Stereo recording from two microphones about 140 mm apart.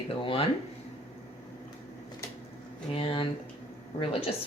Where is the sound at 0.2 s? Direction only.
40° left (ahead or behind).